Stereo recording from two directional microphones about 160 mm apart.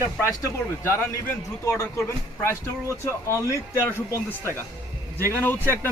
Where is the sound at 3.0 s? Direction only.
15° left (ahead or behind).